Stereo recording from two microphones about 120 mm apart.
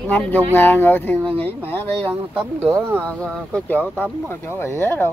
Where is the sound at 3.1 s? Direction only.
10° left (ahead or behind).